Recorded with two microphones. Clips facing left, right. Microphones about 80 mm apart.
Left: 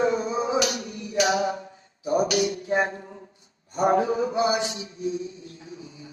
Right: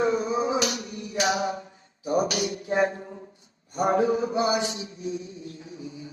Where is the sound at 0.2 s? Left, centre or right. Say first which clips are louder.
Left 1 dB; left.